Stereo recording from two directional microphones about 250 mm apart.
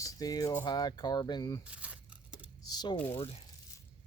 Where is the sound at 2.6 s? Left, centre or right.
Centre.